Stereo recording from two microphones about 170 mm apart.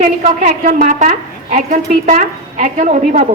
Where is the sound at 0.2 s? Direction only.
50° right (ahead or behind).